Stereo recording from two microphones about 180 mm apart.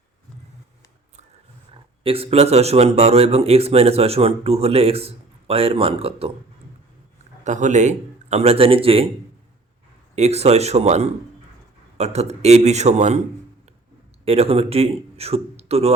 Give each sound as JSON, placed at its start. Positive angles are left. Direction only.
{"t": 1.7, "sound": "a man's voice", "side_deg": -30}
{"t": 7.4, "sound": "a man's voice", "side_deg": -40}
{"t": 10.2, "sound": "a man's voice", "side_deg": -35}
{"t": 14.3, "sound": "a man's voice", "side_deg": -35}